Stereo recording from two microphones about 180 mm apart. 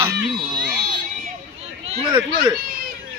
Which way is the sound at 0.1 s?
55° right (ahead or behind).